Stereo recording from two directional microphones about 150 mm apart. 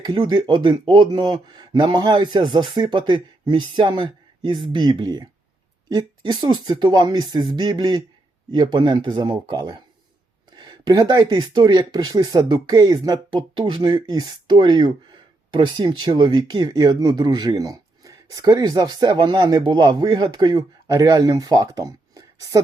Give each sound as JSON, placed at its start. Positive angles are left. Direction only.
{"t": 0.0, "sound": "speech", "side_deg": -30}